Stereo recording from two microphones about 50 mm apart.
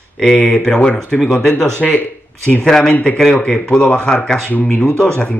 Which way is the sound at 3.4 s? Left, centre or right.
Centre.